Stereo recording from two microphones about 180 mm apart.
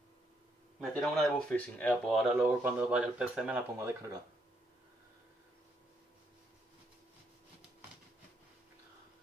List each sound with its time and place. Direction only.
0.7 s speech: centre (ahead or behind)
3.7 s speech: 15° right (ahead or behind)